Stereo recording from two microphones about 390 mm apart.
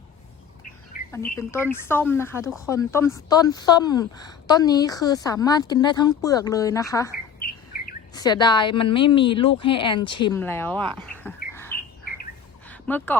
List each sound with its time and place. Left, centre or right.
0.9 s bird: left
1.4 s speech: centre
7.4 s bird: left
8.1 s speech: centre
11.5 s bird: centre
12.6 s a sound: centre